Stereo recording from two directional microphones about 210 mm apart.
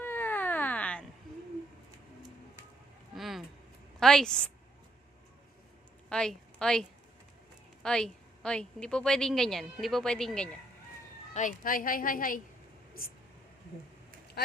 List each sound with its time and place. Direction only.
0.0 s cat: 10° left (ahead or behind)
3.2 s a sound: centre (ahead or behind)
4.0 s speech: 5° left (ahead or behind)
6.1 s a woman's voice: 5° left (ahead or behind)
11.3 s a woman's voice: 40° left (ahead or behind)
14.4 s speech: 50° left (ahead or behind)